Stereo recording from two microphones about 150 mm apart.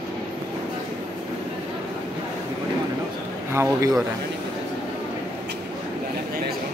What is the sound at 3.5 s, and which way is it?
Speech, 20° right (ahead or behind).